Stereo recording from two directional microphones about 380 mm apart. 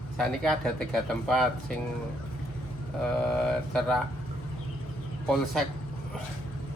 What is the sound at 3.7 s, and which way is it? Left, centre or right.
Speech, centre.